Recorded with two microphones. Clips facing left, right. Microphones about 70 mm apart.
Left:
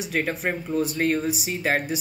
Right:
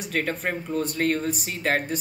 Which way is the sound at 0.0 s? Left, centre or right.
Centre.